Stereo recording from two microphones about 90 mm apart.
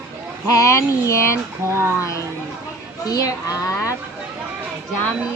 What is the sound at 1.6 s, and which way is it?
Speech, 30° right (ahead or behind).